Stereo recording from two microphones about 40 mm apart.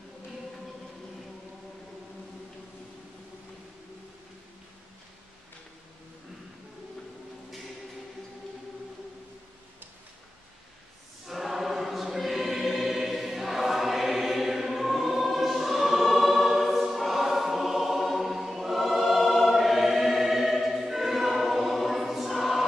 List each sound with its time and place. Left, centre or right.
11.2 s choir: centre